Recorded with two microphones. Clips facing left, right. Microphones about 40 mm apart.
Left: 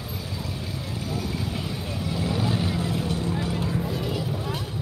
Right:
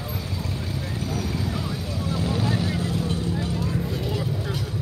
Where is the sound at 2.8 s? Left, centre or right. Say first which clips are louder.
Right 1 dB; left.